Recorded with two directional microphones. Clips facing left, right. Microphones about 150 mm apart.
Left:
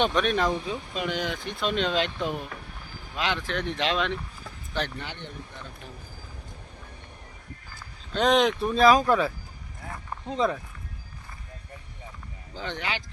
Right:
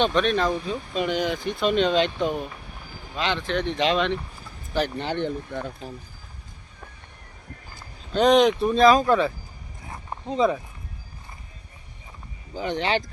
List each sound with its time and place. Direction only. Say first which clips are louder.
0.0 s speech: right 2 dB; 10° left (ahead or behind)
5.1 s speech: right 13 dB; 60° right (ahead or behind)
8.1 s speech: right 5 dB; centre (ahead or behind)
12.5 s speech: right 7 dB; 15° right (ahead or behind)